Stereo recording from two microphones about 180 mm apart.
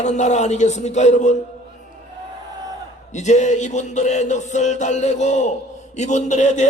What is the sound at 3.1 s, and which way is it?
Speech, 40° left (ahead or behind).